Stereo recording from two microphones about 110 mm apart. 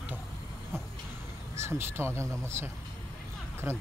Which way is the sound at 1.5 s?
25° right (ahead or behind).